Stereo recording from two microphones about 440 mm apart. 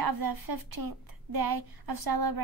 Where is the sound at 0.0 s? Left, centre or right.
Right.